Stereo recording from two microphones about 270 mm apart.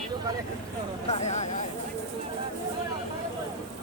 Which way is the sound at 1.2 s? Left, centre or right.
Left.